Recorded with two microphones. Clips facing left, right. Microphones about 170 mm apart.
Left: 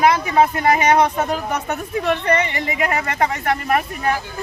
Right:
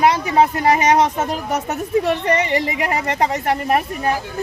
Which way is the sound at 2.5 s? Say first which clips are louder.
Right 2 dB; 30° right (ahead or behind).